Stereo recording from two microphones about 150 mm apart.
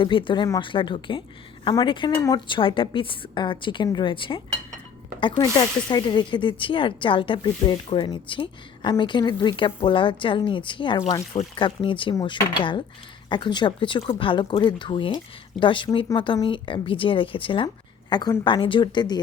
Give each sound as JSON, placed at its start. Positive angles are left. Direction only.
{"t": 0.0, "sound": "speech", "side_deg": 35}
{"t": 2.1, "sound": "speech", "side_deg": 20}
{"t": 2.5, "sound": "speech", "side_deg": 35}